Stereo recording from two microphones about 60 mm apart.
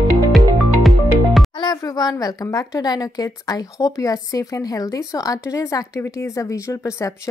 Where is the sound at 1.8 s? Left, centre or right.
Left.